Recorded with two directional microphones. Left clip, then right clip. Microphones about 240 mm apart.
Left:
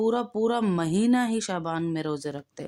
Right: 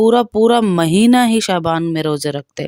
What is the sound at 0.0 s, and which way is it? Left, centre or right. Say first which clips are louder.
Speech: right 13 dB; right.